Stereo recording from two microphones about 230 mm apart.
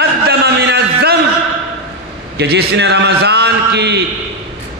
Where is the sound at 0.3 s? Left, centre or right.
Right.